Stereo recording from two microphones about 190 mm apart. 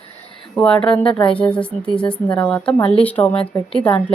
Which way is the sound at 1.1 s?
30° left (ahead or behind).